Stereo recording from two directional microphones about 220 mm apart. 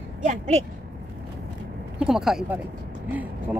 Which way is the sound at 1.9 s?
Centre (ahead or behind).